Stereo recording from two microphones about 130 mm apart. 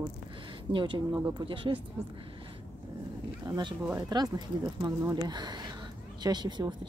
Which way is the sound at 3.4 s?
30° right (ahead or behind).